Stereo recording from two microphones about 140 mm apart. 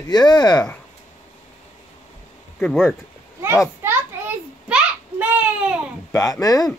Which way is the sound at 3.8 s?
10° right (ahead or behind).